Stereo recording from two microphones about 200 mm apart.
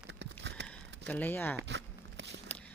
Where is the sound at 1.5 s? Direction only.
60° right (ahead or behind).